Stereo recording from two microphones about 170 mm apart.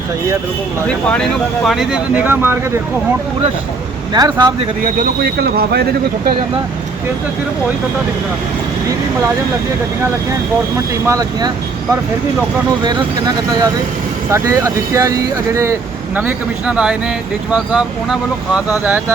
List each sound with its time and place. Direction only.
0.9 s speech: 5° left (ahead or behind); by 2.6 s 10° right (ahead or behind)
4.1 s speech: 25° right (ahead or behind)
5.2 s speech: 70° right (ahead or behind)
11.0 s speech: 20° right (ahead or behind)
12.8 s speech: 25° right (ahead or behind)
16.1 s speech: 5° right (ahead or behind)